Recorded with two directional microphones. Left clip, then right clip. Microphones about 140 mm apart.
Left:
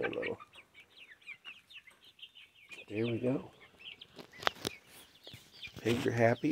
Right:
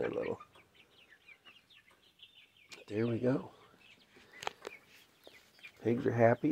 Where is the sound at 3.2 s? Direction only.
25° right (ahead or behind).